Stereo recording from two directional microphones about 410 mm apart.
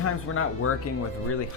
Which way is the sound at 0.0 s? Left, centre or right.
Left.